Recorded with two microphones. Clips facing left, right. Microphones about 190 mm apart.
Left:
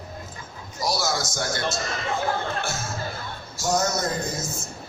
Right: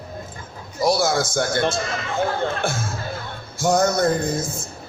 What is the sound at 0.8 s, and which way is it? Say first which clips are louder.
A man's voice: right 7 dB; 55° right (ahead or behind).